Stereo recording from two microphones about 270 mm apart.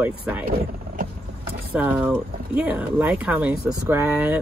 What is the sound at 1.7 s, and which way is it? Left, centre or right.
Speech, centre.